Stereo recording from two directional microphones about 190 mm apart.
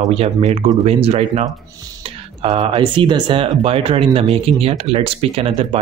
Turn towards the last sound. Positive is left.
turn(degrees=-30)  # may be behind; listen again after turning